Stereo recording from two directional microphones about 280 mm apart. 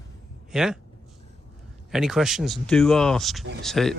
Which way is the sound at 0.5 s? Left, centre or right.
Centre.